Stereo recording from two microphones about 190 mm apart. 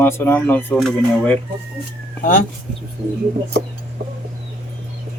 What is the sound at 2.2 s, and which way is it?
Speech, 45° left (ahead or behind).